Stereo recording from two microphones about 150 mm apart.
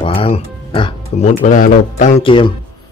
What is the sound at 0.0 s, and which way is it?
Music, 40° left (ahead or behind).